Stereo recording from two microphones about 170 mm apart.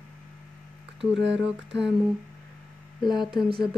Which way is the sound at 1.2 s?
90° right.